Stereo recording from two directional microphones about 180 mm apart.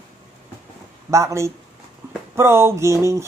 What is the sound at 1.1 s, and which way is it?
Speech, 15° right (ahead or behind).